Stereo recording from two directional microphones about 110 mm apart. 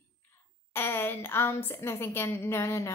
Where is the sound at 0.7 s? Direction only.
20° left (ahead or behind).